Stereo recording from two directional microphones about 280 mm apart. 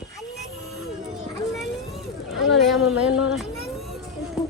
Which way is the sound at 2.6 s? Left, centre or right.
Centre.